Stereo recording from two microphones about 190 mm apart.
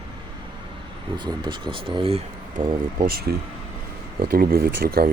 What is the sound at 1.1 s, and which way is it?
Speech, 25° right (ahead or behind).